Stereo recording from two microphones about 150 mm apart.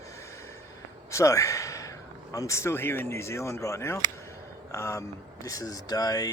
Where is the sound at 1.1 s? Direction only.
20° left (ahead or behind).